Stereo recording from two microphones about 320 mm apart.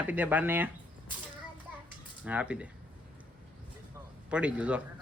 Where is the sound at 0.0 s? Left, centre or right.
Centre.